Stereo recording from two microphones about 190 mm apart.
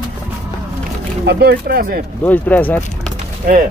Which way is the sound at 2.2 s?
10° left (ahead or behind).